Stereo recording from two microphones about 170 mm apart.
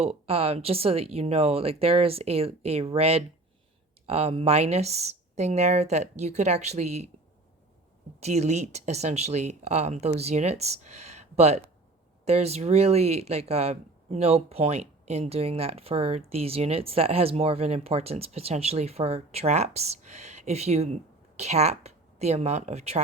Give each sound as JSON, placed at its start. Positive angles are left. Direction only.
{"t": 0.0, "sound": "speech", "side_deg": -35}
{"t": 8.2, "sound": "speech", "side_deg": -40}